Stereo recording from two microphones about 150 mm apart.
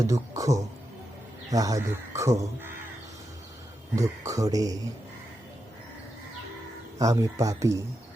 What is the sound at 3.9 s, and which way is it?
Speech, 20° right (ahead or behind).